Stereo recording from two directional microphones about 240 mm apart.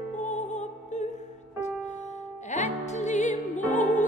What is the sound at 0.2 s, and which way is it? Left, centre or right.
Music, left.